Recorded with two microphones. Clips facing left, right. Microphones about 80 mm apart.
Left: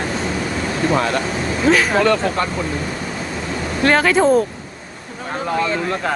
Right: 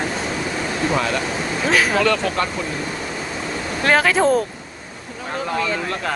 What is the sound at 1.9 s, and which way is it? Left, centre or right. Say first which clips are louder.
Speech: left 3 dB; left.